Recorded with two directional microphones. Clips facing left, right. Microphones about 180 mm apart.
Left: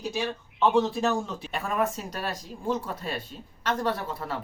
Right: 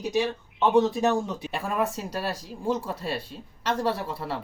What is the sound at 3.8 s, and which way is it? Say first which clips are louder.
Speech: right 2 dB; 10° right (ahead or behind).